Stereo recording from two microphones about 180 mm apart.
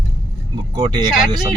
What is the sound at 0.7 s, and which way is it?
Speech, 20° right (ahead or behind).